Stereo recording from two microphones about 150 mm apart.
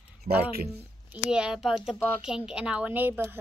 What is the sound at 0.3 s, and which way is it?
Speech, 55° right (ahead or behind).